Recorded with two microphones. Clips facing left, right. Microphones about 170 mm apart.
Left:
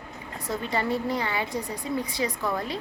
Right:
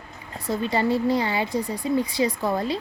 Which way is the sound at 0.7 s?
30° right (ahead or behind).